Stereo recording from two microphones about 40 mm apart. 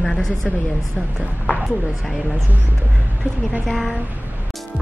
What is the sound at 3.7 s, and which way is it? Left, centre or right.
Speech, centre.